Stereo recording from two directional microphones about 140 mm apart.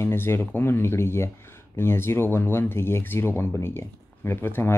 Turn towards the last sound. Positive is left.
turn(degrees=15)  # may be behind; listen again after turning